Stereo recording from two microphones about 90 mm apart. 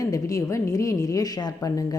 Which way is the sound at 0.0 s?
40° left (ahead or behind).